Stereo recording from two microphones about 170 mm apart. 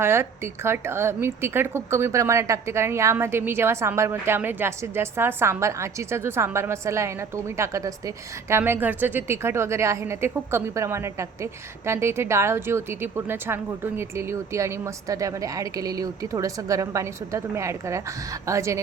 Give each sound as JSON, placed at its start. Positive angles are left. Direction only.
{"t": 0.0, "sound": "speech", "side_deg": -15}